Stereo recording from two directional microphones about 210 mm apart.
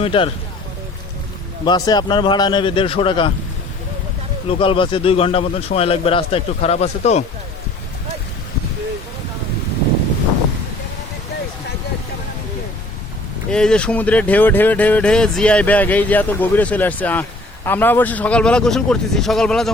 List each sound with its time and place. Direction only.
0.0 s speech: 25° left (ahead or behind)
1.6 s a man's voice: 20° left (ahead or behind)
4.4 s a man's voice: 25° left (ahead or behind)
13.5 s a man's voice: 5° left (ahead or behind)